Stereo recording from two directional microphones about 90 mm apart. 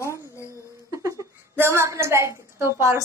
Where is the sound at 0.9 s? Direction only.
35° right (ahead or behind).